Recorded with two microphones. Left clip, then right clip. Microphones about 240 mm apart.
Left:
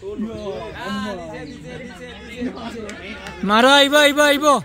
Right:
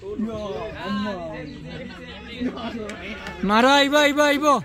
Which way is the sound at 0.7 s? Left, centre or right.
Left.